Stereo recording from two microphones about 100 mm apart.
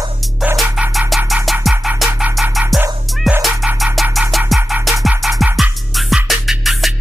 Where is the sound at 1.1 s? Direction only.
Centre (ahead or behind).